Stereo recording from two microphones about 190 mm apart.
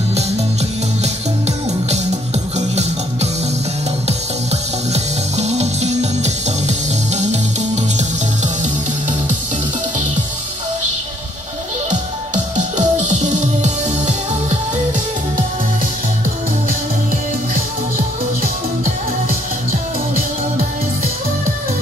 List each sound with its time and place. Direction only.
2.5 s music: 35° right (ahead or behind)
4.5 s music: 35° right (ahead or behind)
12.5 s music: 40° right (ahead or behind)
17.9 s music: 45° right (ahead or behind)